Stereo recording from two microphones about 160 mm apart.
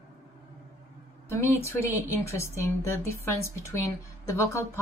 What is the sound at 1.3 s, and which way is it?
A woman's voice, 20° left (ahead or behind).